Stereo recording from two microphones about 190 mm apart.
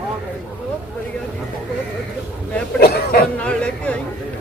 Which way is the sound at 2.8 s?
55° left (ahead or behind).